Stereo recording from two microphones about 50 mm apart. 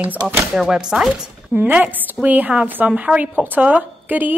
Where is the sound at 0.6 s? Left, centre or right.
Centre.